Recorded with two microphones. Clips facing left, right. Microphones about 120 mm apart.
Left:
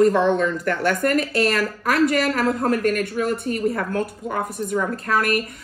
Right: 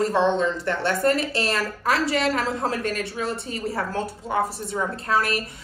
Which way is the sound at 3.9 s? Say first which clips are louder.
Left 2 dB; 25° right (ahead or behind).